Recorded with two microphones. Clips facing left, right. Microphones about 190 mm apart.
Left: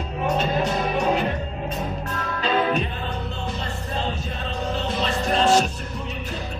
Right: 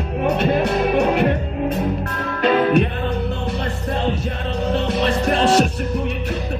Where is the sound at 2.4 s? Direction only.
60° right (ahead or behind).